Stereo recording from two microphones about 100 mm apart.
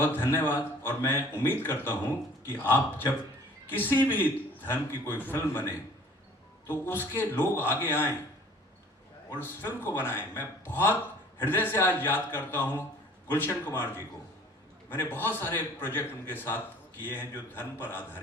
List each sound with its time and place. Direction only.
0.3 s a man's voice: 25° left (ahead or behind)
9.3 s a man's voice: 20° left (ahead or behind)